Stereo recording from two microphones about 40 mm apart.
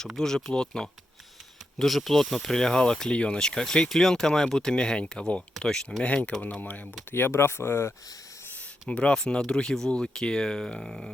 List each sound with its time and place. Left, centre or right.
0.2 s speech: centre
1.8 s speech: centre
4.7 s speech: left
6.6 s speech: left
7.1 s speech: left
8.9 s speech: left; by 11.1 s centre